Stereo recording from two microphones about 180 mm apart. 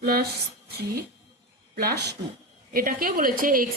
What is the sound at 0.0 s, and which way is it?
Speech, 60° right (ahead or behind).